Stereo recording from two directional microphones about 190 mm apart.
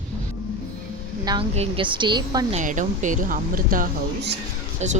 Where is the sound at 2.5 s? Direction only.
40° right (ahead or behind).